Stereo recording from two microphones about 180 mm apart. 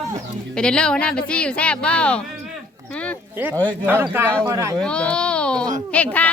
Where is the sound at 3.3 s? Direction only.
10° right (ahead or behind).